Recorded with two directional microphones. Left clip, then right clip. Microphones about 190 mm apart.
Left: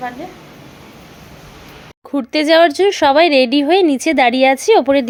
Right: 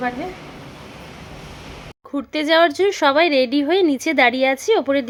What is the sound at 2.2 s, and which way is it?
A woman's voice, 20° left (ahead or behind).